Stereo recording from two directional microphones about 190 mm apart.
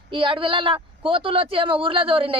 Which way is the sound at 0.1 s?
25° right (ahead or behind).